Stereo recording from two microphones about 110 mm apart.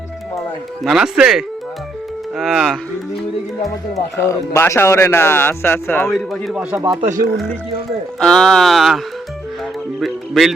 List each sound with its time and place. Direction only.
0.9 s speech: 5° right (ahead or behind)
3.9 s speech: 25° left (ahead or behind)
6.1 s speech: 5° left (ahead or behind)
6.5 s speech: 10° right (ahead or behind)
8.2 s speech: 5° left (ahead or behind)
10.0 s speech: centre (ahead or behind)